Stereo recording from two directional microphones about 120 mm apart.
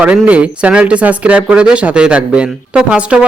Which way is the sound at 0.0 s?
10° right (ahead or behind).